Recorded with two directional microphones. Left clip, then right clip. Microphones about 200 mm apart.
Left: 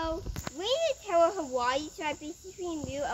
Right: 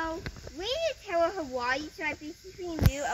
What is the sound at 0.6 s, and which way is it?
A child's voice, 15° right (ahead or behind).